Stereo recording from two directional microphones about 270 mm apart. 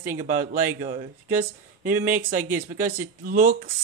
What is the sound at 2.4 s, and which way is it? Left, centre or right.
Speech, centre.